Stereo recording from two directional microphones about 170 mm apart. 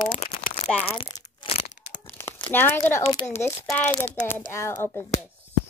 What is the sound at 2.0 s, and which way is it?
Crumpling, 10° left (ahead or behind).